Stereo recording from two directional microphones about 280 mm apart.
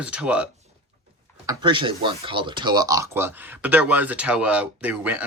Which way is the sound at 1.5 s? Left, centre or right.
Centre.